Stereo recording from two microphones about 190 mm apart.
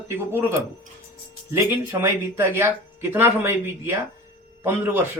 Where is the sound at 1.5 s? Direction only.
15° right (ahead or behind).